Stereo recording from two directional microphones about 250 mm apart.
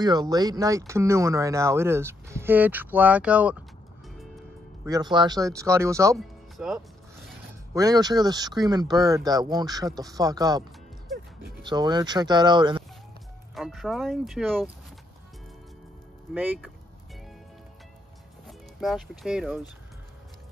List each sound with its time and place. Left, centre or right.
0.0 s speech: centre
4.8 s speech: centre
6.1 s music: centre
7.7 s speech: centre
11.6 s speech: centre
13.6 s speech: centre
16.3 s speech: centre
18.5 s speech: centre